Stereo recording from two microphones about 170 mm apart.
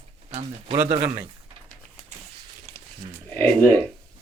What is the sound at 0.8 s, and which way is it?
Speech, 15° right (ahead or behind).